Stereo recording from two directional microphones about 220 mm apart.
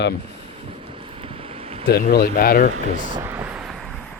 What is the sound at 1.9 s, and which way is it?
Speech, 45° left (ahead or behind).